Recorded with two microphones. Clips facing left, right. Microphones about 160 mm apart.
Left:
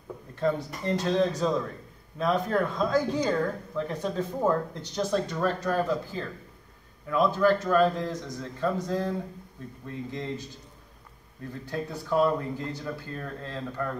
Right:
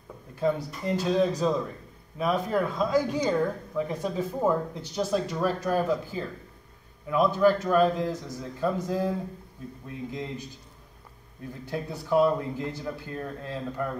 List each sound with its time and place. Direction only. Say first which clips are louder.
0.4 s speech: right 1 dB; 5° right (ahead or behind)
11.7 s speech: right 2 dB; 15° right (ahead or behind)